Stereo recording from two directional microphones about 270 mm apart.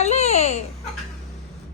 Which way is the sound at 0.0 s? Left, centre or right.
Left.